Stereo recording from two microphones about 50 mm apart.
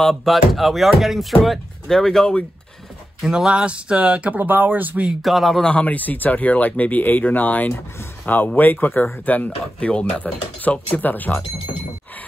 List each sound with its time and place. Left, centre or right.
0.0 s speech: centre
3.2 s speech: centre; by 4.4 s right
4.4 s speech: right
5.2 s speech: centre
5.6 s speech: left
5.9 s speech: left
9.8 s speech: left
10.2 s speech: left